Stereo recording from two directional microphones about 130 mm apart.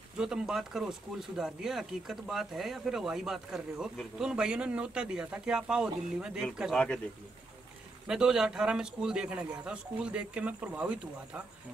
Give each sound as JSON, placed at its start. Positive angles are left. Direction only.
{"t": 0.2, "sound": "a man's voice", "side_deg": -5}
{"t": 8.1, "sound": "a man's voice", "side_deg": -5}